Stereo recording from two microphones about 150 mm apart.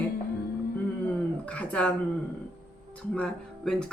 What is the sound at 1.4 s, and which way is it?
Speech, 10° left (ahead or behind).